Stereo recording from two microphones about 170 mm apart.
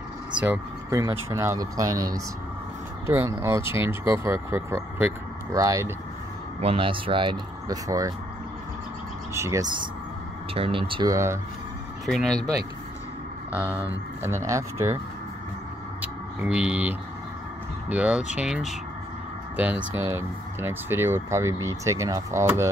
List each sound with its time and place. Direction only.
0.4 s speech: 15° right (ahead or behind)
6.6 s speech: 30° right (ahead or behind)
9.3 s speech: 15° right (ahead or behind)
10.5 s speech: 35° right (ahead or behind)
11.1 s speech: 15° right (ahead or behind)
12.1 s speech: centre (ahead or behind)
13.5 s speech: 10° right (ahead or behind)
16.0 s a sound: 5° right (ahead or behind)
17.8 s speech: 10° right (ahead or behind)